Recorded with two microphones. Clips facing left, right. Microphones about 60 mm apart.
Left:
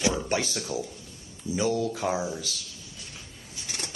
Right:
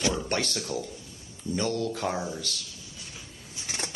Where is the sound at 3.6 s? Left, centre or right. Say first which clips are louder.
Right 2 dB; right.